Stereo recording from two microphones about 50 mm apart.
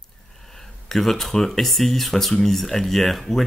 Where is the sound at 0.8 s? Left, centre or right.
Centre.